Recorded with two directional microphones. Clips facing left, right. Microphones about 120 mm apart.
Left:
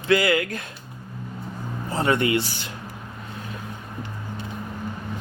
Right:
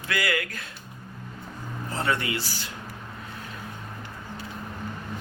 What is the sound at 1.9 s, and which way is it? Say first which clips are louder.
Speech: left 7 dB; 15° left (ahead or behind).